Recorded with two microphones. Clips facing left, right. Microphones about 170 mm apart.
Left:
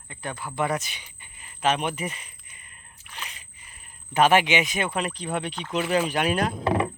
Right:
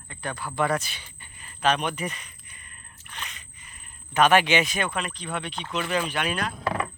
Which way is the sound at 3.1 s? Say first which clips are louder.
Even; 10° left (ahead or behind).